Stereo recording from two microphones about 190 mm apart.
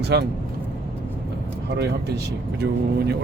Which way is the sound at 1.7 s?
60° right (ahead or behind).